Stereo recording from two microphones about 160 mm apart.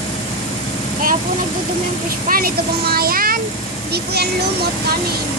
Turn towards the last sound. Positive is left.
turn(degrees=-90)